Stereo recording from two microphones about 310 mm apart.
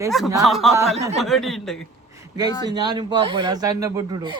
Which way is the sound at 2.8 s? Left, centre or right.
Centre.